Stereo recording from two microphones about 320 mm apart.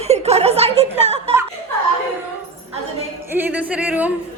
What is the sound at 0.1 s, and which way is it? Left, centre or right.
Speech, centre.